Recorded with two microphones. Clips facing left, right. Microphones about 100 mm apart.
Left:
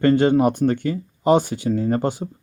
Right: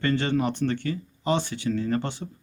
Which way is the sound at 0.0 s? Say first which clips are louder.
Left 9 dB; 45° left (ahead or behind).